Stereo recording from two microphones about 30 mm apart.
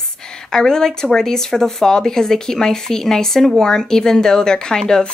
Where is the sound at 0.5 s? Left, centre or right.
Centre.